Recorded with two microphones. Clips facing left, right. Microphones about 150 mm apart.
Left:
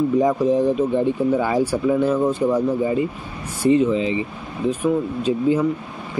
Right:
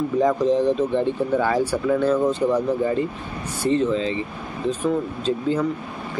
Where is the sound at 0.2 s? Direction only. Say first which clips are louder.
Right 3 dB; 10° left (ahead or behind).